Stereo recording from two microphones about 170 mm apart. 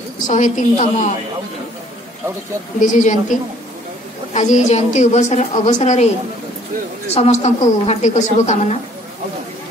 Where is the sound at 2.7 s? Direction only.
50° left (ahead or behind).